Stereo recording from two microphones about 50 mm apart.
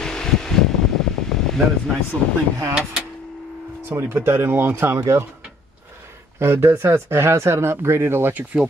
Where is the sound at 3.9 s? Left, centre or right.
Right.